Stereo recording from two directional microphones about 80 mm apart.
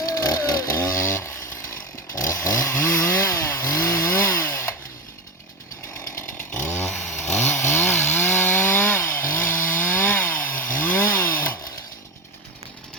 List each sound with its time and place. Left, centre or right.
0.0 s chainsaw: left
6.1 s chainsaw: left